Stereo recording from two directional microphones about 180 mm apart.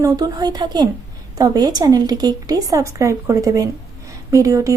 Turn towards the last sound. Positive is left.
turn(degrees=-20)  # may be behind; listen again after turning